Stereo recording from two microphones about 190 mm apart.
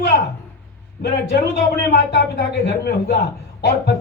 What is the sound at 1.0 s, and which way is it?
Speech, 60° left (ahead or behind).